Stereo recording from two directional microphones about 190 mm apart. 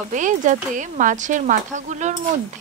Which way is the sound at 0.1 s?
40° right (ahead or behind).